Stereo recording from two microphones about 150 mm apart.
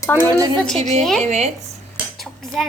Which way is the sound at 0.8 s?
50° right (ahead or behind).